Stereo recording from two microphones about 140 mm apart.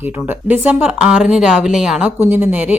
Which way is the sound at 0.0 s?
15° right (ahead or behind).